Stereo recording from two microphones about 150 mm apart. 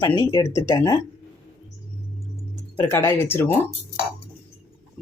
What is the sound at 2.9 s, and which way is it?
Speech, 15° left (ahead or behind).